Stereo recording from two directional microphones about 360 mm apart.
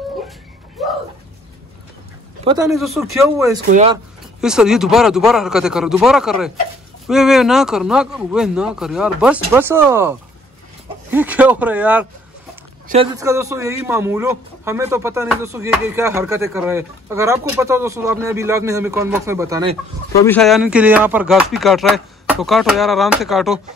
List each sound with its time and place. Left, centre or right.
0.8 s music: centre
2.6 s speech: centre
3.6 s speech: centre
4.4 s speech: centre
12.8 s a man's voice: centre
20.2 s speech: centre